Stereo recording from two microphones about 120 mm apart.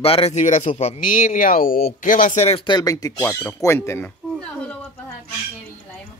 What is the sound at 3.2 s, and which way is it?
Speech, 20° left (ahead or behind).